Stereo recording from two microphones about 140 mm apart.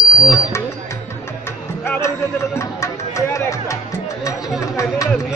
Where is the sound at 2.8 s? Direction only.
20° left (ahead or behind).